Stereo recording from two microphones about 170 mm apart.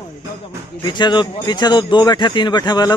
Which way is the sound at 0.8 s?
25° left (ahead or behind).